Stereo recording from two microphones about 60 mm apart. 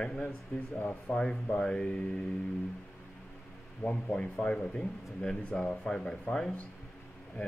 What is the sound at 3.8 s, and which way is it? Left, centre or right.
A man's voice, centre.